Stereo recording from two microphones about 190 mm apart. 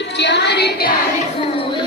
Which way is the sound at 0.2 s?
65° left (ahead or behind).